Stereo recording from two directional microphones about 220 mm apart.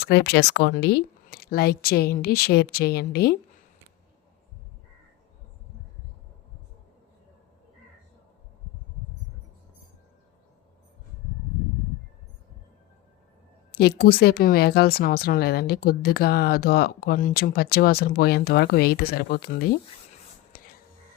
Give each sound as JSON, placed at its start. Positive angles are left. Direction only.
{"t": 0.0, "sound": "speech", "side_deg": 50}
{"t": 14.0, "sound": "speech", "side_deg": 45}
{"t": 20.5, "sound": "whispering", "side_deg": 40}